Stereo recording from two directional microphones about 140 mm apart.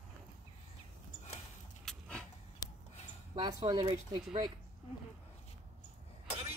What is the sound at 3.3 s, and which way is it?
Speech, 30° right (ahead or behind).